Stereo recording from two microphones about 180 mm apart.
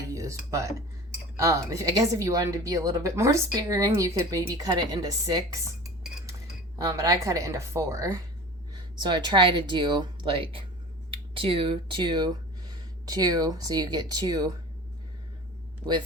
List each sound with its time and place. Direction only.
0.1 s a woman's voice: 15° right (ahead or behind)
6.7 s a woman's voice: 20° right (ahead or behind)